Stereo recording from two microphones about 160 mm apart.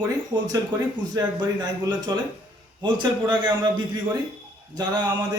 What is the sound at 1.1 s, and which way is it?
A man's voice, 25° right (ahead or behind).